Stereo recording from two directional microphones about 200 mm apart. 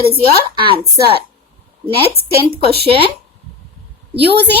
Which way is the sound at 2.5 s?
55° right (ahead or behind).